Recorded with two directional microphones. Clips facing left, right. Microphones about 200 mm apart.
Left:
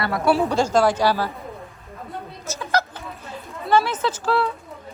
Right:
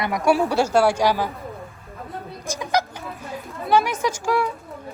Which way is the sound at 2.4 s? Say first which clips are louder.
Right 1 dB; 15° right (ahead or behind).